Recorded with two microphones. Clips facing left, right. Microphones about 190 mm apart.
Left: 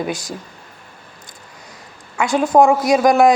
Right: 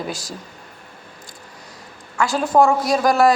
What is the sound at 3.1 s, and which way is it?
Speech, 15° left (ahead or behind).